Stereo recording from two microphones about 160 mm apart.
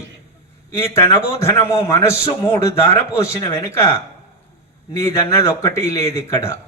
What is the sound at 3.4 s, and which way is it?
Speech, 30° left (ahead or behind).